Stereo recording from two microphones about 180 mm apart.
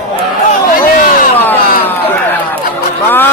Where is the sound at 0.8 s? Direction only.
50° left (ahead or behind).